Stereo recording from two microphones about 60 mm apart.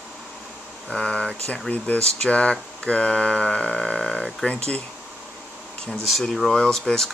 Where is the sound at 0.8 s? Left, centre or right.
Centre.